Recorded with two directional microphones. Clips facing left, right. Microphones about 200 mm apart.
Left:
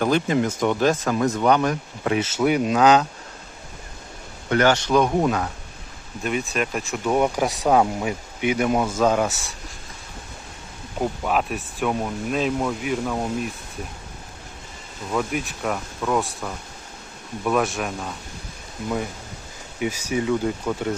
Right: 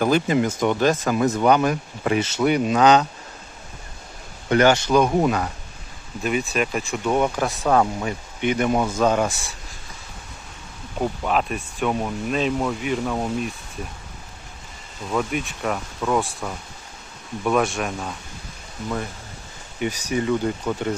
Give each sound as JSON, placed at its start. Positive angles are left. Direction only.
{"t": 0.0, "sound": "speech", "side_deg": -5}
{"t": 4.4, "sound": "speech", "side_deg": -15}
{"t": 4.9, "sound": "speech", "side_deg": 0}
{"t": 11.0, "sound": "speech", "side_deg": 5}
{"t": 15.1, "sound": "speech", "side_deg": 0}
{"t": 19.8, "sound": "speech", "side_deg": 5}